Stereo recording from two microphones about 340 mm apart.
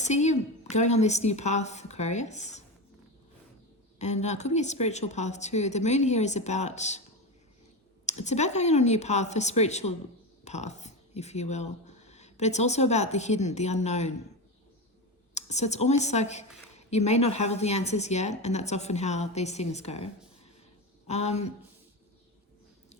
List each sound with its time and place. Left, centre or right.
0.0 s a woman's voice: centre
3.9 s a woman's voice: centre
8.0 s a woman's voice: centre
15.4 s a woman's voice: centre
21.1 s a woman's voice: centre